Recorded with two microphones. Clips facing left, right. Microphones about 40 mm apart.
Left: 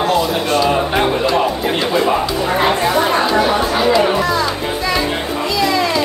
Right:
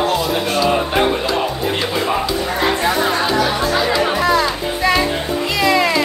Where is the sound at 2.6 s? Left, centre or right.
Left.